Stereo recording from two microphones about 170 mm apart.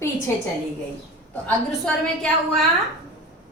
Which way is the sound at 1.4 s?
5° left (ahead or behind).